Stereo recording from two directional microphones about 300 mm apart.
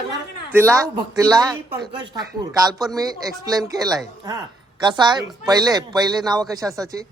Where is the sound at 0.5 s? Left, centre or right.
Centre.